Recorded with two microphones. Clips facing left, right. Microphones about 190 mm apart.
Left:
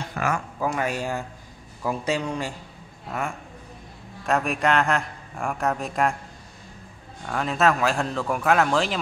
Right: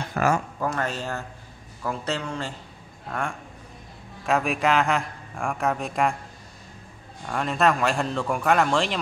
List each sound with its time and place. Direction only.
0.2 s speech: 50° right (ahead or behind)
0.6 s a man's voice: 10° left (ahead or behind)
7.2 s a man's voice: centre (ahead or behind)